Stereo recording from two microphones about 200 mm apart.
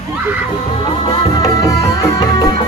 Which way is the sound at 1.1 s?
20° left (ahead or behind).